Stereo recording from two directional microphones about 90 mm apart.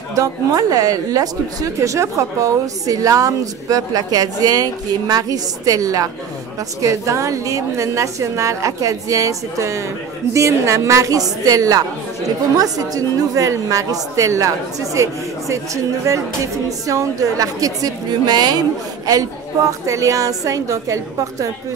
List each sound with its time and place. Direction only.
0.1 s a woman's voice: 40° right (ahead or behind)
19.9 s a woman's voice: 40° right (ahead or behind)